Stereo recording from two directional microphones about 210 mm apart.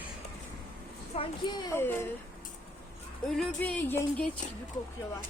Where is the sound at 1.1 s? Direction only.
25° left (ahead or behind).